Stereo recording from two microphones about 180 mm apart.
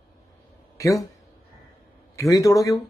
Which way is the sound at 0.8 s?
20° left (ahead or behind).